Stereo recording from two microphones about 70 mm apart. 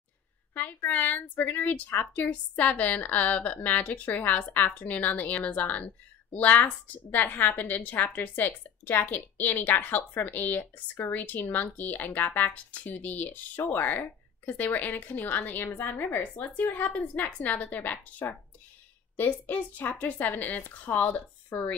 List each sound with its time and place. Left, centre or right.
0.8 s speech: left
19.4 s speech: left